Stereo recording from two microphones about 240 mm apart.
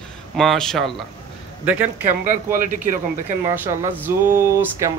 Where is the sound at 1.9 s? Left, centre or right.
Right.